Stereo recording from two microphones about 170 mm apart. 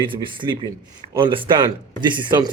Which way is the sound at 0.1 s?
30° right (ahead or behind).